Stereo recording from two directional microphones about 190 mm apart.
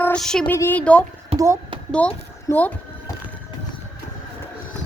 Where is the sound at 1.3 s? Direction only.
30° right (ahead or behind).